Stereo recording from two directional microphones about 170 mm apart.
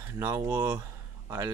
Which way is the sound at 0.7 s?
15° right (ahead or behind).